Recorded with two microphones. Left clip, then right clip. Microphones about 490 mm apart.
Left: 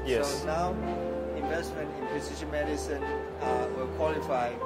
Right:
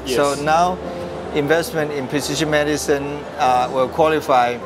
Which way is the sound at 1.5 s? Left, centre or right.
Right.